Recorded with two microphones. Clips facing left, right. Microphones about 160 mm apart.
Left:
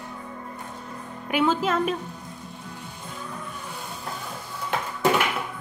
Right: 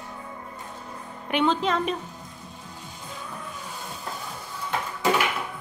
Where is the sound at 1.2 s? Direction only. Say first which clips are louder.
Left 1 dB; 5° left (ahead or behind).